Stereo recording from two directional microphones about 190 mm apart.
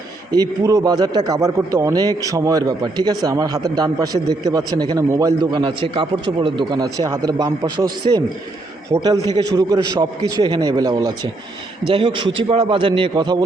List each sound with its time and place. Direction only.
0.3 s speech: 20° right (ahead or behind)
8.9 s speech: 20° right (ahead or behind)